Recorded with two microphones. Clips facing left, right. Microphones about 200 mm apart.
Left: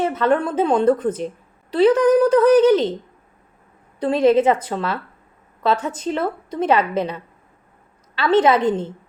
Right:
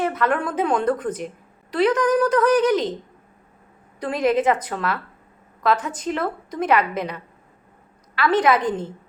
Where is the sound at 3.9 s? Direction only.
30° left (ahead or behind).